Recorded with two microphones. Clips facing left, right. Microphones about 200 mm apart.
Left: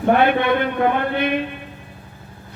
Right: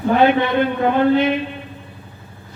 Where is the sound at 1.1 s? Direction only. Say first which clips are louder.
Right 4 dB; 55° left (ahead or behind).